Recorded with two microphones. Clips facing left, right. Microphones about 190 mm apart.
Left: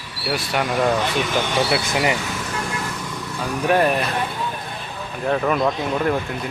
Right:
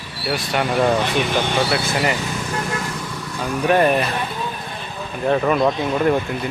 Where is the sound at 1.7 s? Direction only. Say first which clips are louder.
Even; 15° left (ahead or behind).